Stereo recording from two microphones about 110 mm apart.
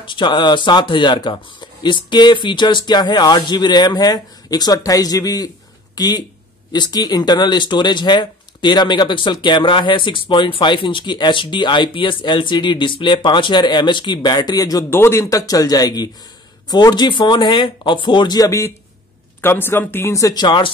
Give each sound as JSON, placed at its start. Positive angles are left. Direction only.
{"t": 0.0, "sound": "speech", "side_deg": 45}
{"t": 14.9, "sound": "speech", "side_deg": 25}
{"t": 19.4, "sound": "speech", "side_deg": 20}
{"t": 20.4, "sound": "speech", "side_deg": 45}